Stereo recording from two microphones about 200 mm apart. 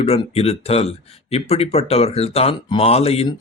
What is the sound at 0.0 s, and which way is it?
A man's voice, 30° left (ahead or behind).